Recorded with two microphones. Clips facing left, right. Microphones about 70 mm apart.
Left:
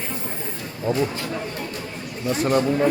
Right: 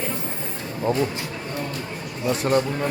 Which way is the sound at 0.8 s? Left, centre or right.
Centre.